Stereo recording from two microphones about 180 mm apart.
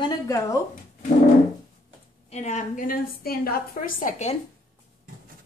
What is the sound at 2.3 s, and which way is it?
A woman's voice, 40° left (ahead or behind).